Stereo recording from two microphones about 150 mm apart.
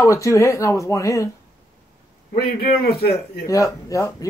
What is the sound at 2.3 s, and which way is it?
A man's voice, 90° left.